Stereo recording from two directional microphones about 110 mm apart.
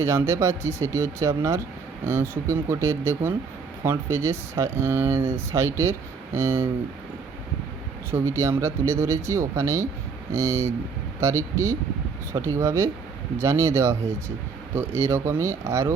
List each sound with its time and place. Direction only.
0.0 s speech: 25° right (ahead or behind)
8.1 s speech: 25° right (ahead or behind)